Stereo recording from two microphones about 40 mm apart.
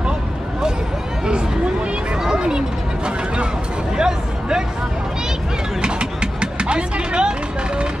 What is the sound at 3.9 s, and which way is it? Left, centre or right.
Hubbub, centre.